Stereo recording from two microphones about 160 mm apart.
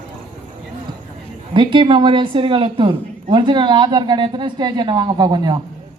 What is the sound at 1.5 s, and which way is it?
Speech, 30° right (ahead or behind).